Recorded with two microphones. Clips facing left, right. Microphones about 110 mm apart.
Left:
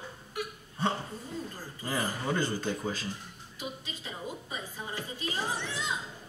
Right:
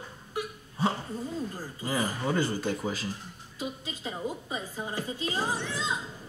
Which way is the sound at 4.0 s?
20° right (ahead or behind).